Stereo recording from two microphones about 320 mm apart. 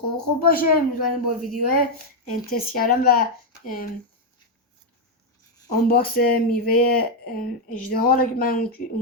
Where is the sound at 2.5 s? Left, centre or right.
Left.